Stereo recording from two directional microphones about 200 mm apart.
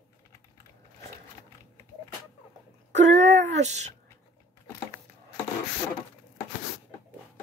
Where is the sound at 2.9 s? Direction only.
35° right (ahead or behind).